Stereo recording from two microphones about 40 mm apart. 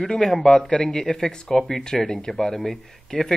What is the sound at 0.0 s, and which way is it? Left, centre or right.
A man's voice, centre.